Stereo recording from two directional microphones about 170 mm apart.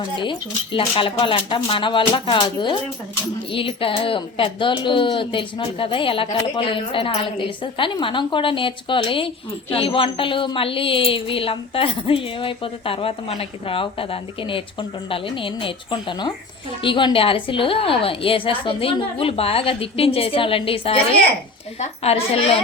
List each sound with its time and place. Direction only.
0.2 s a woman's voice: 30° left (ahead or behind)